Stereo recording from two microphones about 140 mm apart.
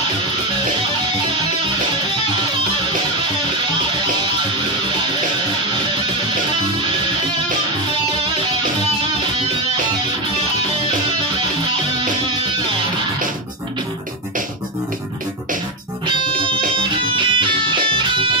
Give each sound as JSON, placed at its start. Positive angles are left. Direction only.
{"t": 17.1, "sound": "music", "side_deg": -35}